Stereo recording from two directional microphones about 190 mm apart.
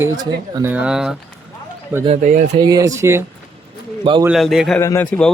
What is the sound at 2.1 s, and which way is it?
Speech, 40° right (ahead or behind).